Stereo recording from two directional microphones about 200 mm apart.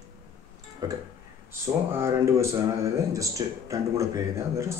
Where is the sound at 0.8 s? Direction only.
15° right (ahead or behind).